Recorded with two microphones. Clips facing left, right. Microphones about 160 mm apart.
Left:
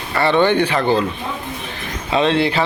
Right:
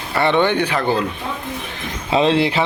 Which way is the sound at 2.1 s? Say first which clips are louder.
Right 1 dB; 30° right (ahead or behind).